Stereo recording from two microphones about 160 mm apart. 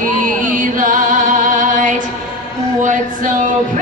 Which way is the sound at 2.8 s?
55° right (ahead or behind).